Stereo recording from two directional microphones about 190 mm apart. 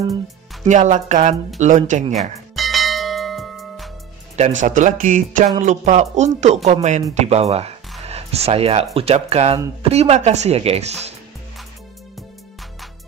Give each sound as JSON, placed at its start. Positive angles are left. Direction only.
{"t": 0.7, "sound": "speech", "side_deg": -40}
{"t": 2.1, "sound": "bell", "side_deg": 0}
{"t": 4.4, "sound": "speech", "side_deg": -40}